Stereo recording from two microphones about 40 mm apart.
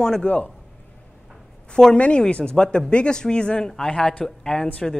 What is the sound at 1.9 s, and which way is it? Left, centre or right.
Speech, left.